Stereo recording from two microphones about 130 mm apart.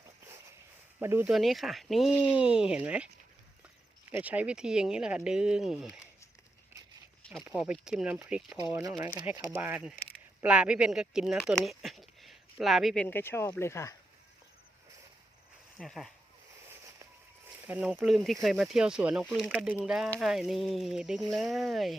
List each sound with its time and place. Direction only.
0.0 s walk: 25° right (ahead or behind)
0.9 s speech: 15° right (ahead or behind)
1.3 s speech: centre (ahead or behind)
4.1 s speech: 10° right (ahead or behind)
7.4 s speech: 10° right (ahead or behind)
8.4 s speech: 25° right (ahead or behind)
9.5 s speech: 15° right (ahead or behind)
11.4 s a sound: centre (ahead or behind)
13.1 s speech: 20° left (ahead or behind)
15.8 s speech: 5° left (ahead or behind)
16.6 s a sound: 25° right (ahead or behind)
17.7 s speech: 10° right (ahead or behind)
19.3 s speech: centre (ahead or behind)